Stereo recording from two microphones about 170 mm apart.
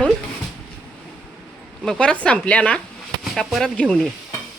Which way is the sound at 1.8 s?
5° left (ahead or behind).